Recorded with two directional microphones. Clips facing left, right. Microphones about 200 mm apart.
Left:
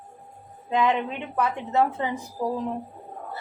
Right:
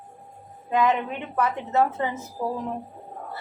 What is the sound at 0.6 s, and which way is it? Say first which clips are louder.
A woman's voice: right 1 dB; 15° left (ahead or behind).